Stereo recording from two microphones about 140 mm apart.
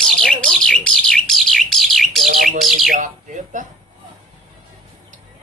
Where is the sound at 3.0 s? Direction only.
65° right (ahead or behind).